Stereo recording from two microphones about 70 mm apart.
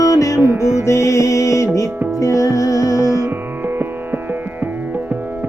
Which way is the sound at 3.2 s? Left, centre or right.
Right.